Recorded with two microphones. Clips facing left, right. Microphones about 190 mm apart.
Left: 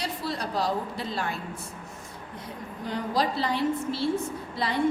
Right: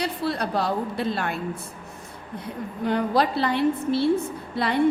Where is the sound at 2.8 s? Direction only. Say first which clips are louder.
Right 6 dB; 60° right (ahead or behind).